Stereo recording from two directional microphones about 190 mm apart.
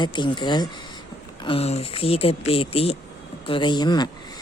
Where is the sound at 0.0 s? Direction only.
25° left (ahead or behind).